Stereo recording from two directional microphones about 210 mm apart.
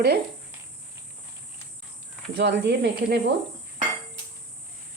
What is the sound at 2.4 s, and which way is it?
Speech, 50° right (ahead or behind).